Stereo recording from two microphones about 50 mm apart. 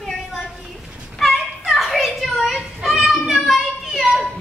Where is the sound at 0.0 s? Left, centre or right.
Centre.